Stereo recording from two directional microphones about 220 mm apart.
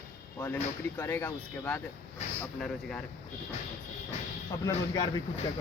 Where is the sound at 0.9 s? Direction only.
10° left (ahead or behind).